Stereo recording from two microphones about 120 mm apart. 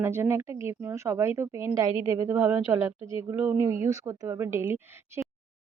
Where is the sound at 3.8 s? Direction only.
25° right (ahead or behind).